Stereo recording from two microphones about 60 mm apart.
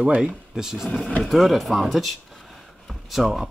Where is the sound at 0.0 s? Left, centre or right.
Centre.